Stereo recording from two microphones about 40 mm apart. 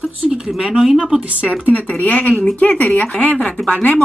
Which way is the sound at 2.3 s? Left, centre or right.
Left.